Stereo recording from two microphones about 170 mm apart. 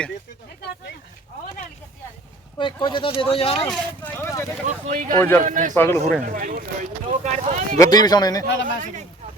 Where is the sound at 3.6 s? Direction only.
5° left (ahead or behind).